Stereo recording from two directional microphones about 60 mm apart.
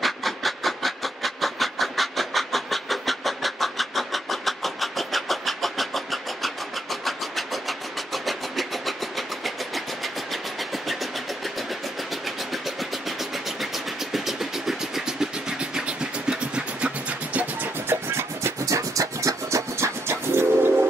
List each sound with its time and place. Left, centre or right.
0.0 s a sound: centre
12.1 s vehicle: centre; by 17.6 s right
17.8 s music: right
18.7 s music: right